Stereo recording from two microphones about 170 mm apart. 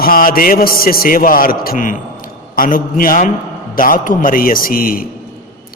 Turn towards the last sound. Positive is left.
turn(degrees=60)  # may be behind; listen again after turning